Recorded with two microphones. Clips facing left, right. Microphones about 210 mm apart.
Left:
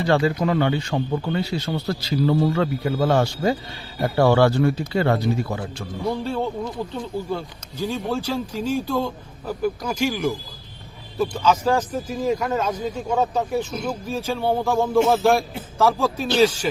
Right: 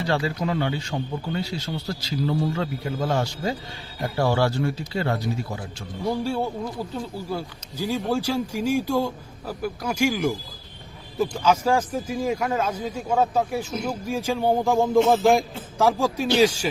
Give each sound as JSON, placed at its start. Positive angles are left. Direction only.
{"t": 0.1, "sound": "a man's voice", "side_deg": 55}
{"t": 6.2, "sound": "speech", "side_deg": -10}